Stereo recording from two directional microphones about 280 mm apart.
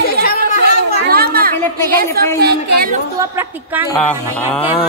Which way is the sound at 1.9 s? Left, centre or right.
Right.